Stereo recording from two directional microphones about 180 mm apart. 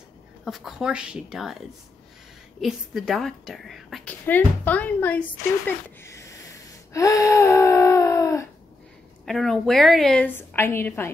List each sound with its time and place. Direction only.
0.5 s a woman's voice: 5° right (ahead or behind)
2.6 s a woman's voice: centre (ahead or behind)
5.7 s a sound: 15° left (ahead or behind)
9.2 s a woman's voice: centre (ahead or behind)